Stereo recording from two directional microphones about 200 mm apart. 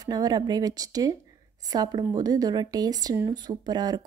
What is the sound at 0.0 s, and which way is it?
A woman's voice, 20° right (ahead or behind).